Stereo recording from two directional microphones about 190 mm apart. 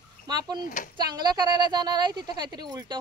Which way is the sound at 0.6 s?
45° left (ahead or behind).